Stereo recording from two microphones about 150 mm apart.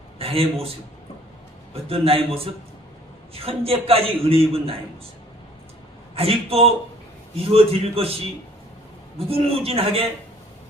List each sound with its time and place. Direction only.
0.2 s a man's voice: 40° right (ahead or behind)
1.7 s a man's voice: 40° right (ahead or behind)
6.1 s a man's voice: 40° right (ahead or behind)
9.1 s a man's voice: 40° right (ahead or behind)